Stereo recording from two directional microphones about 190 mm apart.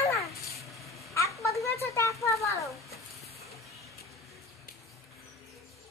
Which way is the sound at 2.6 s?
Centre (ahead or behind).